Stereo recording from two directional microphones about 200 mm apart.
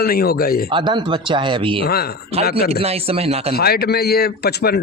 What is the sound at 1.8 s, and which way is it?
Speech, 50° left (ahead or behind).